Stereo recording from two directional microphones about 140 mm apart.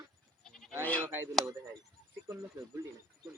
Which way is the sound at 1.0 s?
15° right (ahead or behind).